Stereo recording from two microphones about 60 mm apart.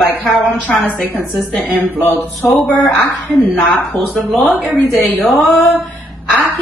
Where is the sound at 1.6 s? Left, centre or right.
Right.